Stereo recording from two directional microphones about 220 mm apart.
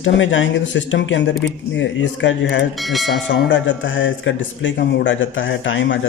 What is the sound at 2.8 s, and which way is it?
Speech, centre (ahead or behind).